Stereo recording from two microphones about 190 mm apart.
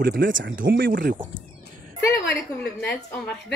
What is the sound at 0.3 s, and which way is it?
Speech, 75° right (ahead or behind).